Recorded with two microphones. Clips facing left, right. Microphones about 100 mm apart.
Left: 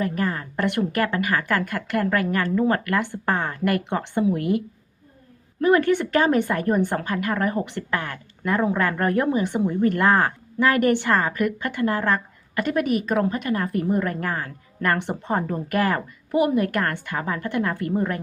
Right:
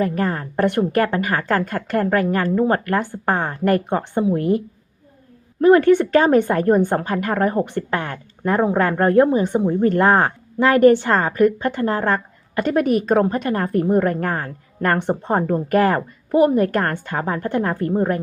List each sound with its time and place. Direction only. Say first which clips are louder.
0.0 s a woman's voice: right 4 dB; 40° right (ahead or behind)
1.9 s a woman's voice: right 4 dB; 35° right (ahead or behind)
3.1 s a woman's voice: right 3 dB; 20° right (ahead or behind)
3.6 s a woman's voice: right 5 dB; 35° right (ahead or behind)
5.6 s a woman's voice: right 6 dB; 45° right (ahead or behind)